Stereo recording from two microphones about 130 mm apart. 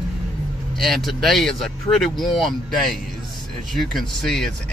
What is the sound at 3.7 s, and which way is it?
Speech, centre (ahead or behind).